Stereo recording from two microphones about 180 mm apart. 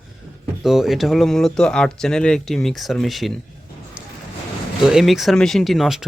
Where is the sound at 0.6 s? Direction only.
Centre (ahead or behind).